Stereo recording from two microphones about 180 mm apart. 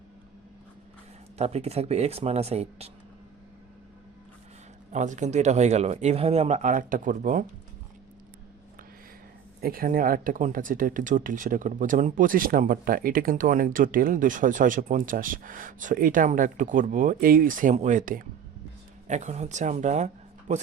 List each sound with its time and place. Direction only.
1.4 s speech: 35° right (ahead or behind)
4.9 s speech: 40° right (ahead or behind)
9.6 s speech: 55° right (ahead or behind)